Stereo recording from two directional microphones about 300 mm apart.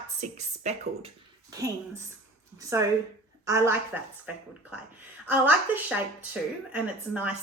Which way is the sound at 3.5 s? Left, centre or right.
Centre.